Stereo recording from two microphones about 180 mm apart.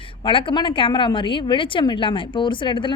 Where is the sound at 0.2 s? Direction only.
30° left (ahead or behind).